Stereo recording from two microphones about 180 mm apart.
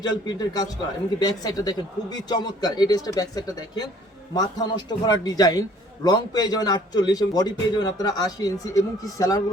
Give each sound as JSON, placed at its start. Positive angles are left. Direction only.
{"t": 0.0, "sound": "a man's voice", "side_deg": 25}